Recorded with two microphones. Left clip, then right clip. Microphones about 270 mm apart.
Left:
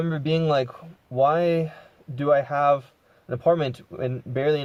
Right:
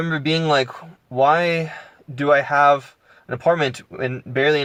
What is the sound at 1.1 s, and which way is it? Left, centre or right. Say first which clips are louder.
Speech: right 4 dB; centre.